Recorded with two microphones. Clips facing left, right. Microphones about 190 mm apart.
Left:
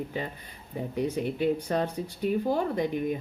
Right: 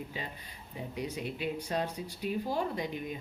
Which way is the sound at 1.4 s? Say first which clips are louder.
Left 7 dB; 50° left (ahead or behind).